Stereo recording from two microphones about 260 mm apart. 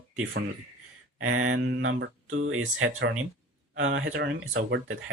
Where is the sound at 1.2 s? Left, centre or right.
Right.